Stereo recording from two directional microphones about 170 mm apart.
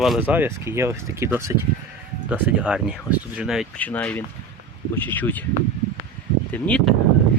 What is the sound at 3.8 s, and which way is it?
Speech, 10° left (ahead or behind).